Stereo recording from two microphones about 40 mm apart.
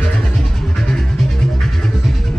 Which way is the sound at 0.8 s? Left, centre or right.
Centre.